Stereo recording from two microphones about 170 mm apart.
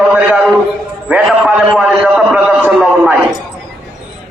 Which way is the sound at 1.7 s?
Centre (ahead or behind).